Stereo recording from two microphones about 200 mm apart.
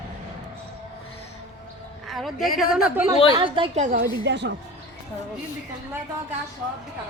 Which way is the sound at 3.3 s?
25° right (ahead or behind).